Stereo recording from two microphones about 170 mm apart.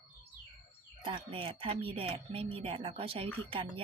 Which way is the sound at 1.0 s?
30° right (ahead or behind).